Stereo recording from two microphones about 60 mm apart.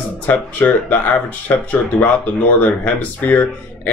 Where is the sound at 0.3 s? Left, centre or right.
Left.